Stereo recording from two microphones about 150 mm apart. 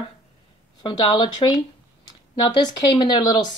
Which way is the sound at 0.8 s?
30° left (ahead or behind).